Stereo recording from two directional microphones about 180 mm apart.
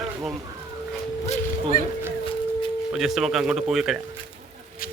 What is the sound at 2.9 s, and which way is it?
Speech, centre (ahead or behind).